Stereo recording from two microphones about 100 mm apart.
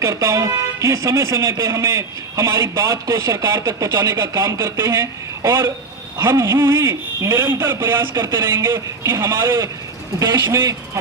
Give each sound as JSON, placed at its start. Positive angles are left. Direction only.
{"t": 0.0, "sound": "speech", "side_deg": -25}